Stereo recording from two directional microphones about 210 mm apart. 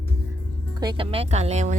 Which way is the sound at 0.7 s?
20° right (ahead or behind).